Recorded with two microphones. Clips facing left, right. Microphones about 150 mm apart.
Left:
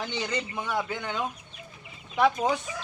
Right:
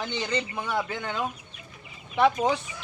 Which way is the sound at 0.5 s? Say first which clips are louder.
Right 1 dB; 10° right (ahead or behind).